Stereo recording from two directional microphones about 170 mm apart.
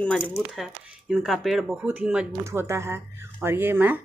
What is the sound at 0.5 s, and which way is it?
Speech, centre (ahead or behind).